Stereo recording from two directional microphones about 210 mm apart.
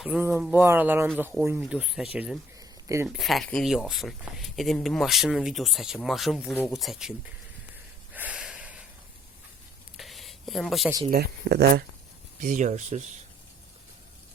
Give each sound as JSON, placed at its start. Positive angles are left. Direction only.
{"t": 0.0, "sound": "speech", "side_deg": -5}
{"t": 2.6, "sound": "a sound", "side_deg": -15}
{"t": 3.2, "sound": "speech", "side_deg": 0}
{"t": 8.1, "sound": "snort", "side_deg": -5}
{"t": 10.0, "sound": "a sound", "side_deg": 0}
{"t": 11.1, "sound": "speech", "side_deg": -50}
{"t": 12.4, "sound": "speech", "side_deg": -35}